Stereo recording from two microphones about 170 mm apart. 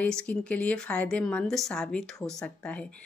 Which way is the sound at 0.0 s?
5° left (ahead or behind).